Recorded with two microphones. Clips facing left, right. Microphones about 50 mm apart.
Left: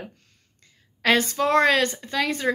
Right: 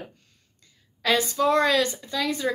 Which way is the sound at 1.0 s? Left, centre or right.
Left.